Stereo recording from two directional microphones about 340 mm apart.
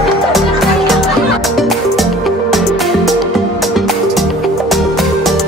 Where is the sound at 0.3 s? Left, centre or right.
Centre.